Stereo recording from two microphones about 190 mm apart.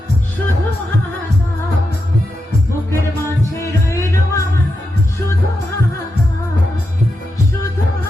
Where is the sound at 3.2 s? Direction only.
15° left (ahead or behind).